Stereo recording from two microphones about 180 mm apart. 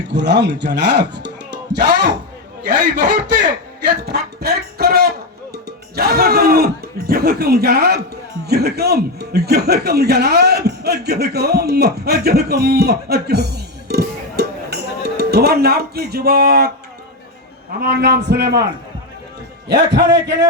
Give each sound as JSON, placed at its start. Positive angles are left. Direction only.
{"t": 0.1, "sound": "speech", "side_deg": -75}
{"t": 3.4, "sound": "a man's voice", "side_deg": -65}
{"t": 17.7, "sound": "a man's voice", "side_deg": -60}
{"t": 19.6, "sound": "a man's voice", "side_deg": -70}